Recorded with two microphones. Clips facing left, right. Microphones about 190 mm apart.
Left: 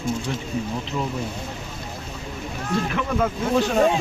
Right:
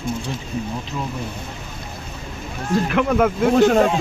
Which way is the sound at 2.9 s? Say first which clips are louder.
Right 6 dB; 65° right (ahead or behind).